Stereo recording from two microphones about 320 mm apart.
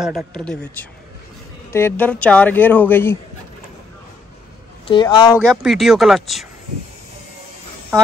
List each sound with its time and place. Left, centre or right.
0.0 s speech: centre
4.8 s speech: centre